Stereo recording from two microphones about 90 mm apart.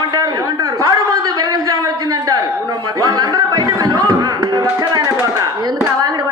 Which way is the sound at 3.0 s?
45° right (ahead or behind).